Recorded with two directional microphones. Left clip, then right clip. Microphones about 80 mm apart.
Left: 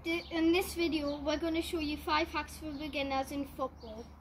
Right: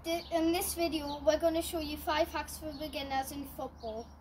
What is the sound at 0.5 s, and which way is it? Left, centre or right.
Speech, right.